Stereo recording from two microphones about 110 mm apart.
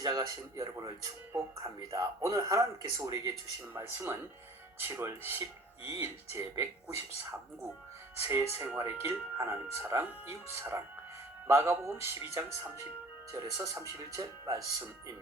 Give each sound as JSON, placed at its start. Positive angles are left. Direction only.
{"t": 0.0, "sound": "speech", "side_deg": -35}
{"t": 8.1, "sound": "speech", "side_deg": -20}